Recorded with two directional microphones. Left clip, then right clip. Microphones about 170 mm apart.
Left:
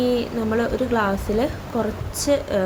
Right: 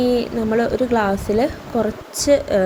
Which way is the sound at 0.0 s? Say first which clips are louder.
Right 3 dB; 20° right (ahead or behind).